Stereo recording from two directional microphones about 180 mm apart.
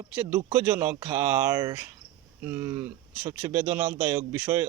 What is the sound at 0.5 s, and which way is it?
Speech, 10° right (ahead or behind).